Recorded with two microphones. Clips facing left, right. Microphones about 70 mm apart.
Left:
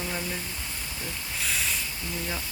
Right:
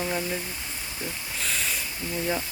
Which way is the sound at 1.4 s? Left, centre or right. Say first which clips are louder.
Even; centre.